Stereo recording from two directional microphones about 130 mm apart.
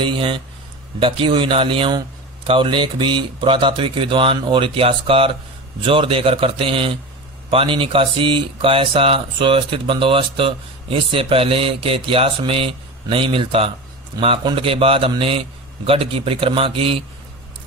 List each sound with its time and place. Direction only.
0.0 s speech: 40° right (ahead or behind)